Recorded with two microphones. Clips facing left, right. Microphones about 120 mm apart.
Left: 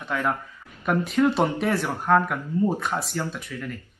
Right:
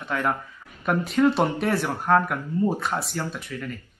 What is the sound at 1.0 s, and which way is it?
Speech, centre (ahead or behind).